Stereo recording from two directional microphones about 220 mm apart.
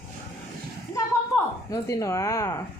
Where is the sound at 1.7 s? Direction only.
15° left (ahead or behind).